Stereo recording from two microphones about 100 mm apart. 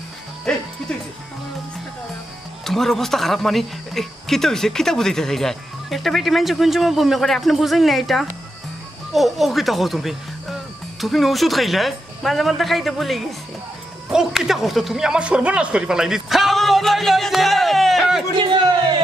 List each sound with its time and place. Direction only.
0.5 s speech: 10° left (ahead or behind)
2.6 s speech: 5° left (ahead or behind)
18.4 s speech: 50° right (ahead or behind)